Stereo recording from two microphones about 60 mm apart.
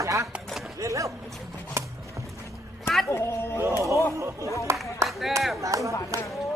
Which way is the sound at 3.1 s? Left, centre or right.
Left.